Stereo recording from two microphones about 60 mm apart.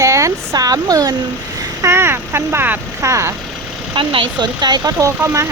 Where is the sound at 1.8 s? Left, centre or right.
Right.